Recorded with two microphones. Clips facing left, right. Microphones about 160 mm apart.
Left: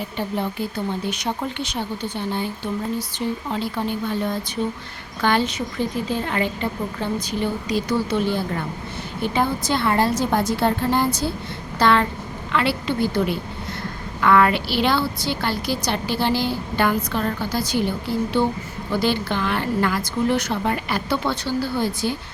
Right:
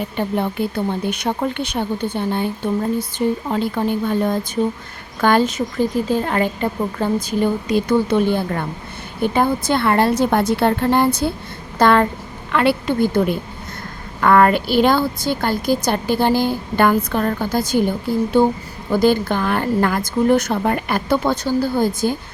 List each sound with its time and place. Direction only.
0.3 s a woman's voice: 55° right (ahead or behind)